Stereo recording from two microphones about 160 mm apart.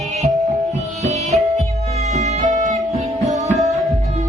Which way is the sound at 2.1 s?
50° right (ahead or behind).